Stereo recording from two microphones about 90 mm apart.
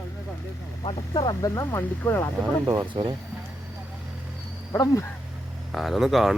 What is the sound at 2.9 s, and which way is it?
Speech, 55° right (ahead or behind).